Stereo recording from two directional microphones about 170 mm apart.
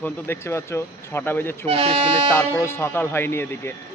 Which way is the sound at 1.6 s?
35° right (ahead or behind).